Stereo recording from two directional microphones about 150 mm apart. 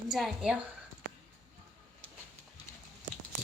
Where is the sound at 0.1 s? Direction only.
Centre (ahead or behind).